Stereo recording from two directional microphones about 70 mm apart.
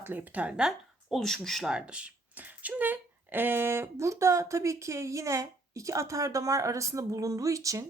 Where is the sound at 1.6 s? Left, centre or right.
Centre.